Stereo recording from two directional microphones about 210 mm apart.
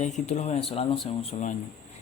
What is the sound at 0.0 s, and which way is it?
Speech, 35° left (ahead or behind).